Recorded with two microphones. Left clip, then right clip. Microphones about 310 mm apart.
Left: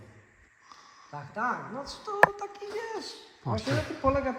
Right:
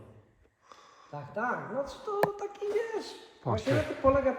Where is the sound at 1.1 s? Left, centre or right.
Centre.